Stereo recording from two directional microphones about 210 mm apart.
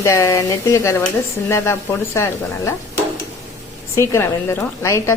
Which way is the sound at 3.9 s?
15° left (ahead or behind).